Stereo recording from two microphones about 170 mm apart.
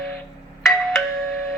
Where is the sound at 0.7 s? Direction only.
Centre (ahead or behind).